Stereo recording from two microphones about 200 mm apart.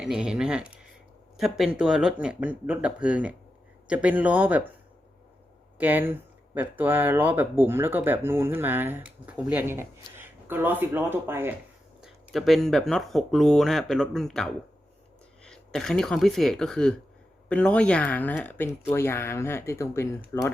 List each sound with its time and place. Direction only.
0.0 s speech: 5° right (ahead or behind)
5.7 s speech: 10° right (ahead or behind)
12.0 s speech: centre (ahead or behind)